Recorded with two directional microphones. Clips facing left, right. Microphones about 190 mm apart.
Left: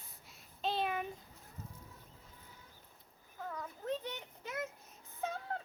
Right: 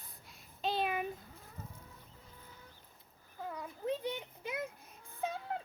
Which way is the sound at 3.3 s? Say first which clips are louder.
Right 1 dB; 15° right (ahead or behind).